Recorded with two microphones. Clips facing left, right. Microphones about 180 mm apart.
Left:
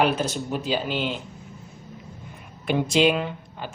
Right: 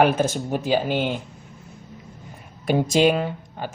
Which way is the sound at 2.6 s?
40° right (ahead or behind).